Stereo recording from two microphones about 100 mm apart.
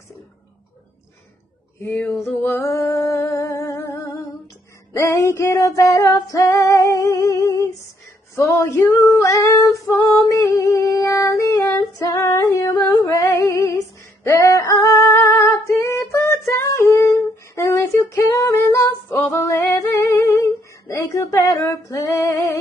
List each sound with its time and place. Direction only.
1.8 s a sound: 15° left (ahead or behind)
2.2 s music: 20° left (ahead or behind)
5.8 s female singing: 30° left (ahead or behind)